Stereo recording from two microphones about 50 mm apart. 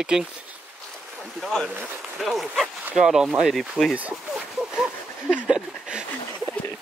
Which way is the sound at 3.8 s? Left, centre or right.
Right.